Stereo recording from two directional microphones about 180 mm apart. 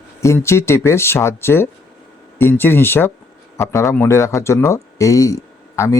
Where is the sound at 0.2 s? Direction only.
15° left (ahead or behind).